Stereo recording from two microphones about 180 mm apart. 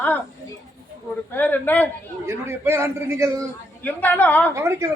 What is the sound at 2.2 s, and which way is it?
A man's voice, 15° right (ahead or behind).